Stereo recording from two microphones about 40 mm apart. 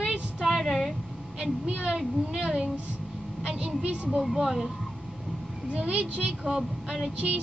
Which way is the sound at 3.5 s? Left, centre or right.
Right.